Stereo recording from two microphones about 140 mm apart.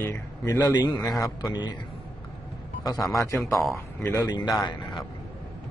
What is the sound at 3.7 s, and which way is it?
A man's voice, 20° left (ahead or behind).